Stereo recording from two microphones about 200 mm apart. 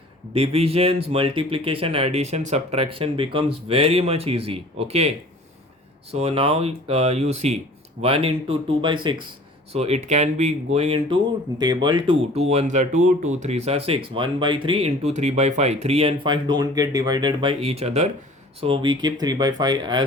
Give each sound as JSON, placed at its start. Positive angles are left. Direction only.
{"t": 0.3, "sound": "speech", "side_deg": -30}